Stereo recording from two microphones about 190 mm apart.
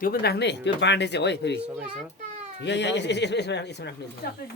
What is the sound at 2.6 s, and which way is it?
Speech, 65° left (ahead or behind).